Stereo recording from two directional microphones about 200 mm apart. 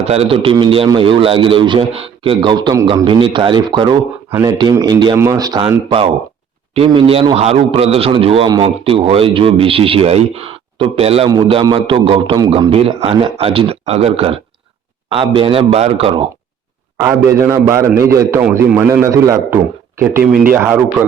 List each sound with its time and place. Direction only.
0.0 s a man's voice: 30° right (ahead or behind)
17.0 s a man's voice: 15° right (ahead or behind)